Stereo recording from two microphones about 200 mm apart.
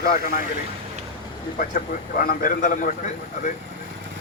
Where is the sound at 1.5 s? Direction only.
45° left (ahead or behind).